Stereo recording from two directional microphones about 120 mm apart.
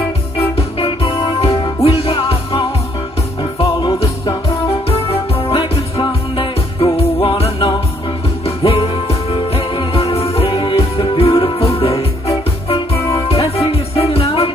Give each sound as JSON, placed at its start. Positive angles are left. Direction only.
{"t": 0.4, "sound": "music", "side_deg": 50}
{"t": 4.5, "sound": "music", "side_deg": 55}
{"t": 13.3, "sound": "music", "side_deg": 55}